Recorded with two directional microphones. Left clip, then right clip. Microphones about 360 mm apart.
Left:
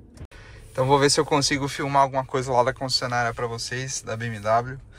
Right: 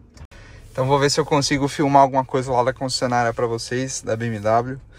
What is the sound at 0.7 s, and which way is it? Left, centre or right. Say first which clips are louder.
Speech: right 1 dB; centre.